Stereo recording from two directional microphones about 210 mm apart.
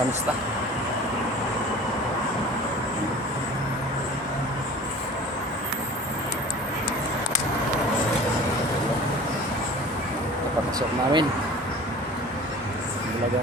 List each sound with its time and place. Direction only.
10.8 s speech: 20° right (ahead or behind)